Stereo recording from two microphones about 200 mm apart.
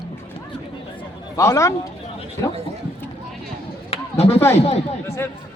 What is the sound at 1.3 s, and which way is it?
Speech, 15° left (ahead or behind).